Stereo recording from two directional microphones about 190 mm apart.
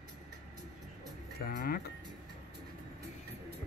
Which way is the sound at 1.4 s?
50° left (ahead or behind).